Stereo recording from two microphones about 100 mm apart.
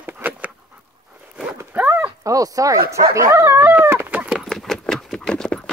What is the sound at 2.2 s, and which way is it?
Speech, 35° right (ahead or behind).